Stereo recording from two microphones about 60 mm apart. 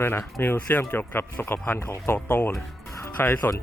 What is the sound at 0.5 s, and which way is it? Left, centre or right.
Speech, left.